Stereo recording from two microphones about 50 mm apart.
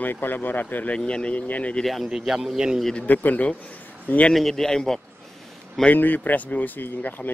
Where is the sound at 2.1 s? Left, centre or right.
Centre.